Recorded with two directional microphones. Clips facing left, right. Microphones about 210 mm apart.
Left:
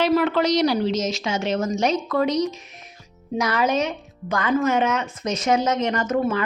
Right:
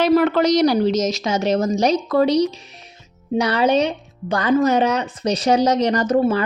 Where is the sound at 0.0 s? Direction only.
40° right (ahead or behind).